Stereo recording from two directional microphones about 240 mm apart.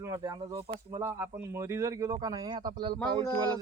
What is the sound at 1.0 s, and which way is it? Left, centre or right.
Speech, centre.